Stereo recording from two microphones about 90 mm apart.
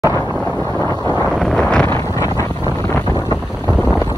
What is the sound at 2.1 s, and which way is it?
Wind noise, 40° left (ahead or behind).